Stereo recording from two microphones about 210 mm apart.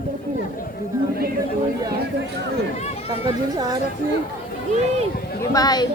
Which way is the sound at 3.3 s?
20° right (ahead or behind).